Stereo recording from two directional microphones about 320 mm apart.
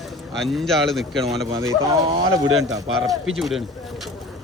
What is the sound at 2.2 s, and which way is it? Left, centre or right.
Speech, right.